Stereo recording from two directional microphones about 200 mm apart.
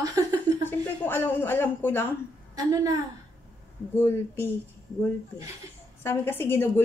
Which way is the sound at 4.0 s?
10° left (ahead or behind).